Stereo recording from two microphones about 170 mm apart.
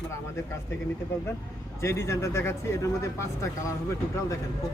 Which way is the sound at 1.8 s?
15° left (ahead or behind).